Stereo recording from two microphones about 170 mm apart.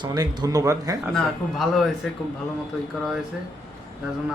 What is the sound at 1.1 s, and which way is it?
Speech, centre (ahead or behind).